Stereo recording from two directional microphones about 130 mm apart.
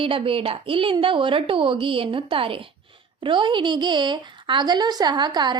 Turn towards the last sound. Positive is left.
turn(degrees=-35)  # may be behind; listen again after turning